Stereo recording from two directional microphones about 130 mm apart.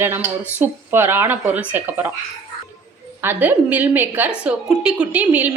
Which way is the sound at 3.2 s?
15° right (ahead or behind).